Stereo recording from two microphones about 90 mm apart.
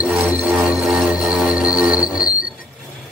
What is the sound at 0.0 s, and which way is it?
Music, 10° right (ahead or behind).